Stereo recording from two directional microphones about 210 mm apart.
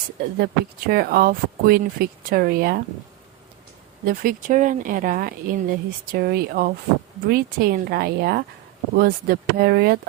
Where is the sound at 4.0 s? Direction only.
40° right (ahead or behind).